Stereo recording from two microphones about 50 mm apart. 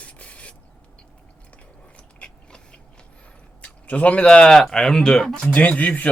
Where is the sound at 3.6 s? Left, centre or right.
Left; by 5.3 s centre.